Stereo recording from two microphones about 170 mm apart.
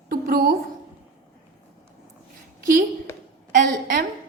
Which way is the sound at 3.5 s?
55° right (ahead or behind).